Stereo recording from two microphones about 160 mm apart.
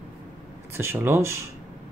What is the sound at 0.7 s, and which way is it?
Speech, 15° right (ahead or behind).